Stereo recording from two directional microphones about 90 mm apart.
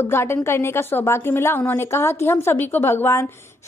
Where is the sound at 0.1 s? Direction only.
30° left (ahead or behind).